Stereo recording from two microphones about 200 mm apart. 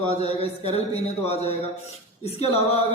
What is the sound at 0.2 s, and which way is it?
Speech, 30° left (ahead or behind).